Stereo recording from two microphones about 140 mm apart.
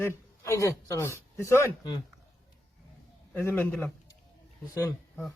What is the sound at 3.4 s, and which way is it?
Speech, 10° left (ahead or behind).